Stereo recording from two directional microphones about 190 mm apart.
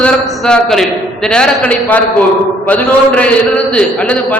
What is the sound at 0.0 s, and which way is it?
A man's voice, 5° left (ahead or behind).